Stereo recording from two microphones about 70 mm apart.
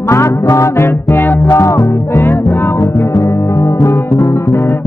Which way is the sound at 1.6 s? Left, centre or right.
Left.